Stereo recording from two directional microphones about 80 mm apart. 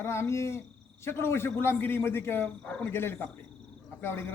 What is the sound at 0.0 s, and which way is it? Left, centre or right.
Speech, left.